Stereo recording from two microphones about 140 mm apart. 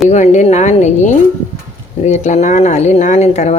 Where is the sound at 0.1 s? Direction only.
55° left (ahead or behind).